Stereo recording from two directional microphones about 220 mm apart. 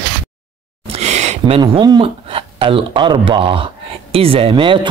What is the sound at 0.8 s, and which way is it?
Speech, 30° right (ahead or behind).